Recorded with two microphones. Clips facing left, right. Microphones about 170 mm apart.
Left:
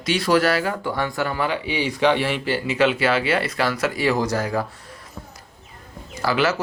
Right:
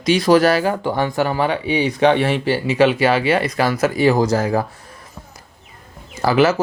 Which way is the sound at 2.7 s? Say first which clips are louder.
Right 4 dB; 15° right (ahead or behind).